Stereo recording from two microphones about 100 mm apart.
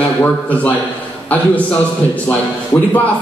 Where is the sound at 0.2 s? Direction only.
15° left (ahead or behind).